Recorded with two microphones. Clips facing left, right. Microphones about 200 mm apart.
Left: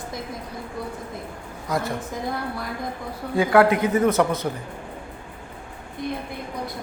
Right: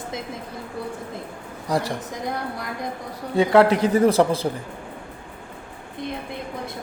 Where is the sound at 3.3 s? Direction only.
25° right (ahead or behind).